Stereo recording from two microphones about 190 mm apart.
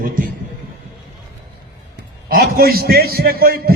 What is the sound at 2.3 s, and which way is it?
A man's voice, 50° right (ahead or behind).